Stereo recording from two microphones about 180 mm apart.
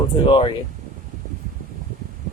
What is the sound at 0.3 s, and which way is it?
Speech, 25° left (ahead or behind).